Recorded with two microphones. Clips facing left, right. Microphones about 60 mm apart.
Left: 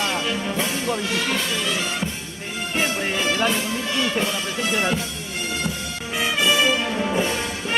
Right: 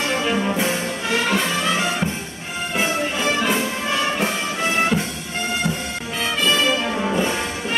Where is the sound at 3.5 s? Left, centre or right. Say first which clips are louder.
Right 3 dB; right.